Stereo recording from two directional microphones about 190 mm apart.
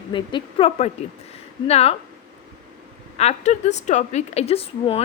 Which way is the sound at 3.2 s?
35° left (ahead or behind).